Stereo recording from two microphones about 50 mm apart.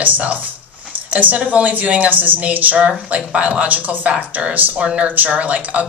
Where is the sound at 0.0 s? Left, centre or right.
Right.